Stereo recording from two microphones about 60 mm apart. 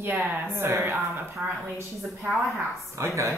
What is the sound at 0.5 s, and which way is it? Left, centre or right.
Speech, right.